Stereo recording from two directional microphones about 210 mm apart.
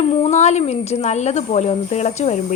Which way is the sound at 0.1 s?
30° left (ahead or behind).